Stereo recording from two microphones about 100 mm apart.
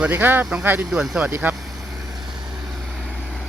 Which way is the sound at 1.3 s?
20° right (ahead or behind).